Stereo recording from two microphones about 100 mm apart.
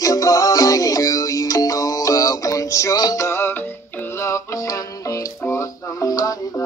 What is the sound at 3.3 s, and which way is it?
Music, 25° left (ahead or behind).